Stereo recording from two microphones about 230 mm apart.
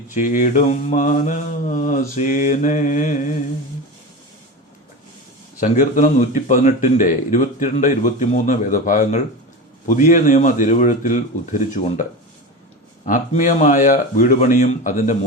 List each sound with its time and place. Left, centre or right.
0.1 s speech: left
5.5 s speech: left
13.1 s speech: left